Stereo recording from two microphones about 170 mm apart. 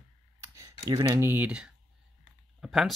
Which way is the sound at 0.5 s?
20° right (ahead or behind).